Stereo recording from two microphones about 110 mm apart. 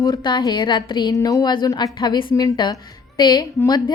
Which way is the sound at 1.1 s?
30° left (ahead or behind).